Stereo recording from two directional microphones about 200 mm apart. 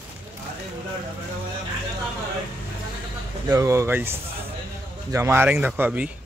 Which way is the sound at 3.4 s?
15° right (ahead or behind).